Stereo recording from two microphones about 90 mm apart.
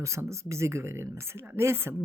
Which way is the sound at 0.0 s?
30° right (ahead or behind).